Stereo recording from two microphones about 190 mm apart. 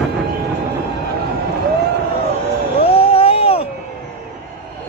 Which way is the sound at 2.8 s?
30° left (ahead or behind).